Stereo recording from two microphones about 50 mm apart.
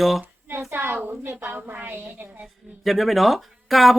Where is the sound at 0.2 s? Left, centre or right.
Right.